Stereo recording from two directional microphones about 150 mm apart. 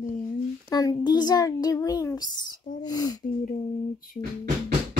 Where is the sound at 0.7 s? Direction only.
25° left (ahead or behind).